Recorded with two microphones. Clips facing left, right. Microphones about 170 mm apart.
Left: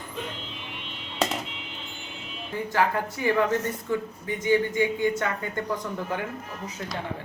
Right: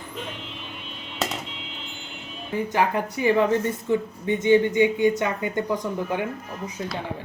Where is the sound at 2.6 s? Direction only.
20° right (ahead or behind).